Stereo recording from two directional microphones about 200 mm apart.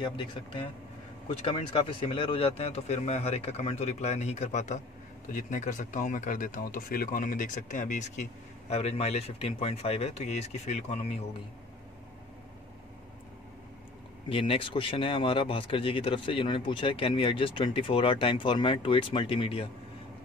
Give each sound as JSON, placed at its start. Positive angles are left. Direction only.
{"t": 0.0, "sound": "speech", "side_deg": 25}
{"t": 14.3, "sound": "speech", "side_deg": 25}